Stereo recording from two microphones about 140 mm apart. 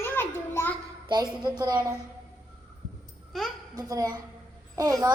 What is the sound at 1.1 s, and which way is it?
Speech, 30° right (ahead or behind).